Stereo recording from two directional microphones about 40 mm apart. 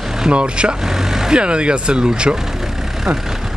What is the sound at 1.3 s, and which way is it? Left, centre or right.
Speech, right.